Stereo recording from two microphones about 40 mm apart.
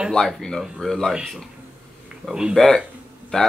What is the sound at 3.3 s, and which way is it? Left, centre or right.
Speech, left.